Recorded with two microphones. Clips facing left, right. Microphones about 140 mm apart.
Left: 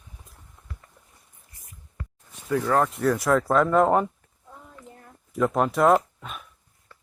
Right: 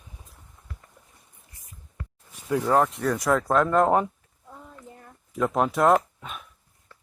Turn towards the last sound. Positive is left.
turn(degrees=0)  # may be behind; listen again after turning